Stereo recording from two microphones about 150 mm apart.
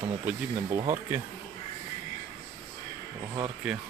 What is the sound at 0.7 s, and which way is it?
Speech, 35° right (ahead or behind).